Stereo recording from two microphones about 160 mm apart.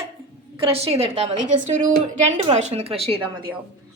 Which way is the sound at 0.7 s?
40° right (ahead or behind).